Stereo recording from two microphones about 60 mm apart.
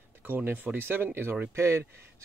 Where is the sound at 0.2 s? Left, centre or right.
Right.